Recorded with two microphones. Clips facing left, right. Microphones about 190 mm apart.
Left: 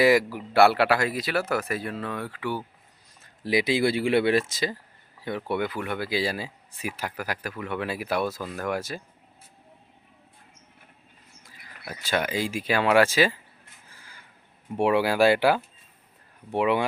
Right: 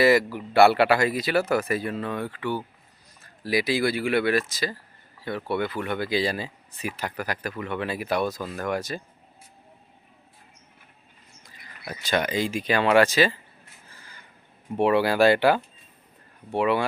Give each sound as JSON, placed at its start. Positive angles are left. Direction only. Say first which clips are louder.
{"t": 0.0, "sound": "speech", "louder": "right 1 dB", "side_deg": 10}
{"t": 3.2, "sound": "speech", "louder": "left 1 dB", "side_deg": 20}
{"t": 5.5, "sound": "speech", "louder": "right 2 dB", "side_deg": 10}
{"t": 11.4, "sound": "speech", "louder": "right 2 dB", "side_deg": 5}
{"t": 13.9, "sound": "crow", "louder": "right 2 dB", "side_deg": 10}
{"t": 14.8, "sound": "speech", "louder": "right 1 dB", "side_deg": 10}